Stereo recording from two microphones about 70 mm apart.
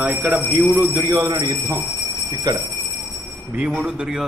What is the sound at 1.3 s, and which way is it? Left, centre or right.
Speech, right.